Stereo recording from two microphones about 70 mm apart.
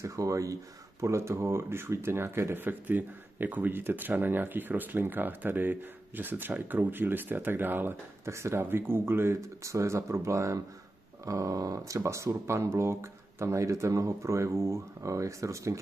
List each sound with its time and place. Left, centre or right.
0.0 s speech: right
8.3 s speech: right